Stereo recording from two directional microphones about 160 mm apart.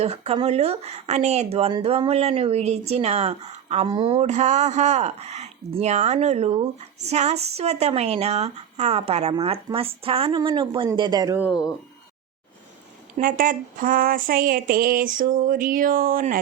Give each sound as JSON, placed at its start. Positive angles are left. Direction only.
{"t": 0.0, "sound": "a woman's voice", "side_deg": -40}
{"t": 13.1, "sound": "speech", "side_deg": -60}